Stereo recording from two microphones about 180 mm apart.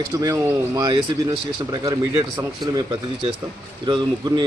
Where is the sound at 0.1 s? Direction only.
15° right (ahead or behind).